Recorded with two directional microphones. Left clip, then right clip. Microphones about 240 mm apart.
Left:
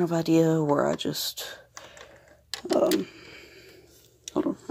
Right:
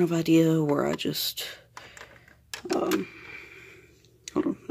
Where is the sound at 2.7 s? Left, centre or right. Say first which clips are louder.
Left 4 dB; centre.